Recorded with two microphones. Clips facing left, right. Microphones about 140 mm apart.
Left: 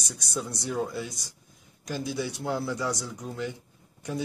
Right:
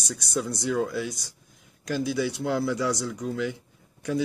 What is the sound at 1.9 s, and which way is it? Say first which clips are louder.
A man's voice: right 5 dB; 80° right.